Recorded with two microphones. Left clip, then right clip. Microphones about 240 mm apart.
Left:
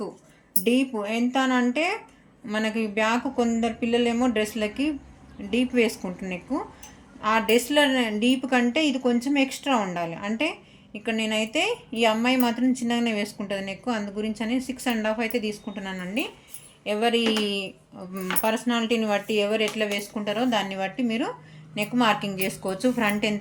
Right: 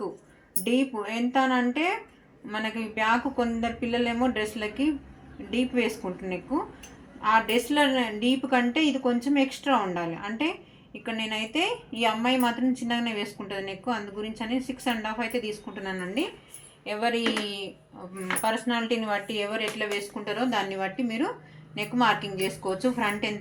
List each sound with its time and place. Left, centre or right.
0.6 s speech: left